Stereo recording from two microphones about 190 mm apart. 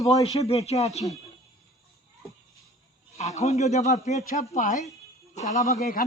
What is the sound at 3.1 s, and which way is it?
Speech, 35° left (ahead or behind).